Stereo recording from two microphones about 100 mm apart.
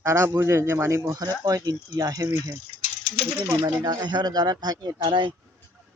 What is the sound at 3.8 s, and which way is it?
Speech, 45° right (ahead or behind).